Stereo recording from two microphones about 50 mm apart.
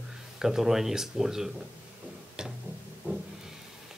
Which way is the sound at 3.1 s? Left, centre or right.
Right.